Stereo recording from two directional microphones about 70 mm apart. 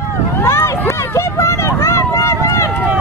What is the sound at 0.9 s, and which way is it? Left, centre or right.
Run, left.